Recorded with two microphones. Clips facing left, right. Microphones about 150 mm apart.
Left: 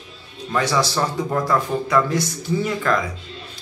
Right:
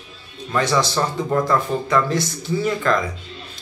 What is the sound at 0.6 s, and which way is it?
A man's voice, 10° left (ahead or behind).